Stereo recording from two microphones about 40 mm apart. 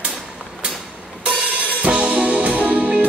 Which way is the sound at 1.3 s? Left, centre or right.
Right.